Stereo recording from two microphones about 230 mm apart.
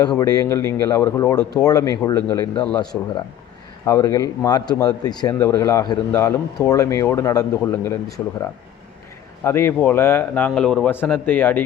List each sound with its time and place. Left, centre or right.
0.2 s speech: centre
9.4 s speech: centre